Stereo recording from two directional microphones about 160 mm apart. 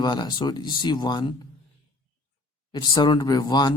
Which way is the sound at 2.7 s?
30° left (ahead or behind).